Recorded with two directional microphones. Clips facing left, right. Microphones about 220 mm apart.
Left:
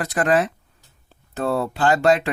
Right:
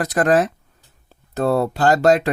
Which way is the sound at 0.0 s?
40° right (ahead or behind).